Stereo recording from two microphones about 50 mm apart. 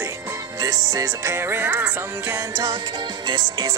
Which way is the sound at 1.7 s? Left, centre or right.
Right.